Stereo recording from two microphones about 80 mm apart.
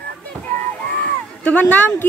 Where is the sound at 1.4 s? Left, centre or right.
Centre.